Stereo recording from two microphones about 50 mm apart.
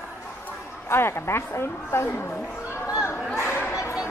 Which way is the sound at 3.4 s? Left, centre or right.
Left.